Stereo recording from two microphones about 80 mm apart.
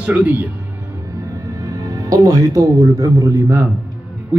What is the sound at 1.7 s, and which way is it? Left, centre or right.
Speech, right.